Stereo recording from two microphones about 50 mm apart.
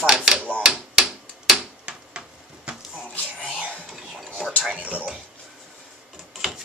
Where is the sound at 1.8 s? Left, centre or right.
Right.